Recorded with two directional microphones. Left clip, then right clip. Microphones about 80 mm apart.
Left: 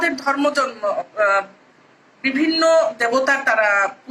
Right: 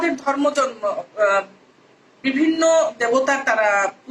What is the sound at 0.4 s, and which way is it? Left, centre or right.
Speech, centre.